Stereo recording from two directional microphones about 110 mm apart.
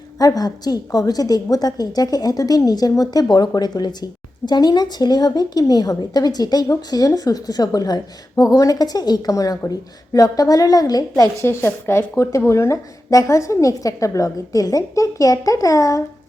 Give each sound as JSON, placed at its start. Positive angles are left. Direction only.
{"t": 0.2, "sound": "a woman's voice", "side_deg": 35}